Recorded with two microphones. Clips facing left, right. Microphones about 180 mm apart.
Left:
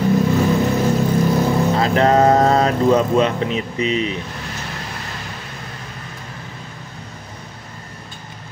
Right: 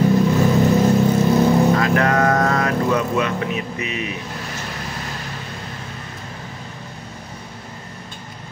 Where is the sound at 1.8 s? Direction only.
25° left (ahead or behind).